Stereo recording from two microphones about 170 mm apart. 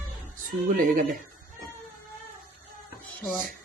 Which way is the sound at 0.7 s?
55° right (ahead or behind).